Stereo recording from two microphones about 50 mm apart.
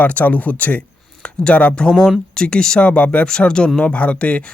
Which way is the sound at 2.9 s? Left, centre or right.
Left.